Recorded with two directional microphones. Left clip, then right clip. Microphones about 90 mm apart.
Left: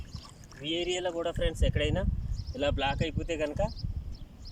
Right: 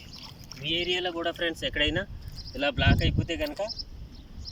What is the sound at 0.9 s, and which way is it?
Speech, 40° left (ahead or behind).